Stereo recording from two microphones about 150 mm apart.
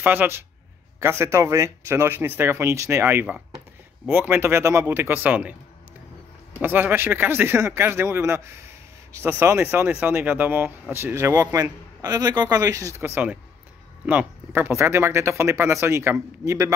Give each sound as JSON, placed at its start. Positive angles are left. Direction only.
{"t": 0.0, "sound": "speech", "side_deg": -10}
{"t": 6.6, "sound": "a man's voice", "side_deg": -15}